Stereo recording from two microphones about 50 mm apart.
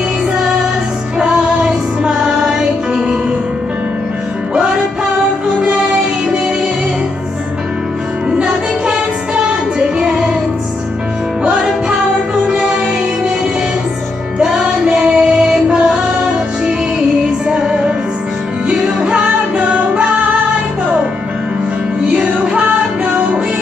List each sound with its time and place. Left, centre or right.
1.3 s music: centre
8.3 s music: centre
14.4 s music: centre
17.2 s music: centre
22.1 s music: right